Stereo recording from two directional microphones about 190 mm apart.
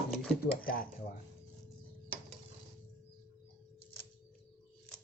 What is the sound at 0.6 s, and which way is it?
Speech, 50° left (ahead or behind).